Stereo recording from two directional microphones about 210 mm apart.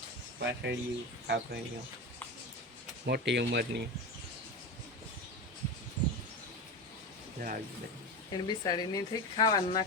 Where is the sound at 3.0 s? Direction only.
55° right (ahead or behind).